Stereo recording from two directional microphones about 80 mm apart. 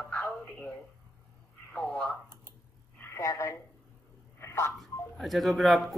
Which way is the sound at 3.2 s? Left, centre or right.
Left.